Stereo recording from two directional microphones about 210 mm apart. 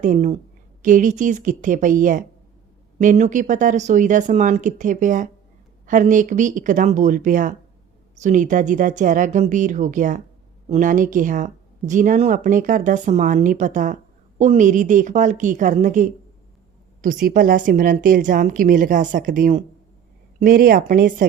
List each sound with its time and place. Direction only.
0.0 s speech: 35° right (ahead or behind)